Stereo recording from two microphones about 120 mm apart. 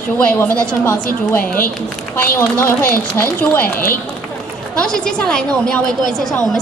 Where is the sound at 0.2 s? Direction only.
10° left (ahead or behind).